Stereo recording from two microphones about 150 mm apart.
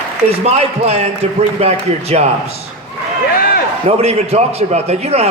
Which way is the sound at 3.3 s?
75° left (ahead or behind).